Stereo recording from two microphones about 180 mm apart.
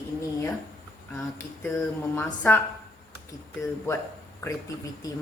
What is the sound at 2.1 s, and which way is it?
Speech, 10° left (ahead or behind).